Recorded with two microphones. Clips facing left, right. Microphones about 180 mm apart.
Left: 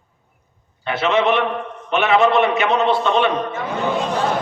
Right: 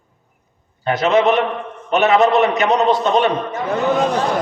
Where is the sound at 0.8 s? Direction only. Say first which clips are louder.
Right 3 dB; 40° right (ahead or behind).